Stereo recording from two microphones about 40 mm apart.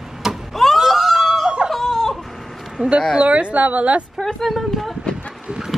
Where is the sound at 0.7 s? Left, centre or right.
Centre.